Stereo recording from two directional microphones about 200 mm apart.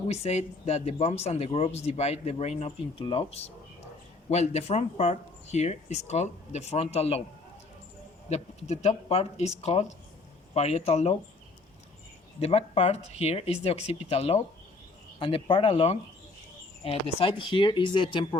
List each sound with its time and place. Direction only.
0.1 s speech: 35° left (ahead or behind)
8.3 s speech: 35° left (ahead or behind)
12.4 s speech: 30° left (ahead or behind)